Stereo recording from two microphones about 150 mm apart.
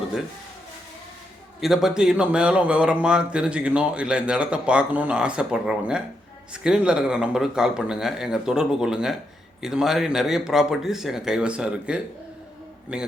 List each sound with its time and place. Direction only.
1.6 s speech: 5° right (ahead or behind)